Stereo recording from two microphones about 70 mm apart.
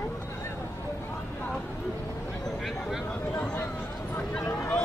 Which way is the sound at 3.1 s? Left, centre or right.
Left.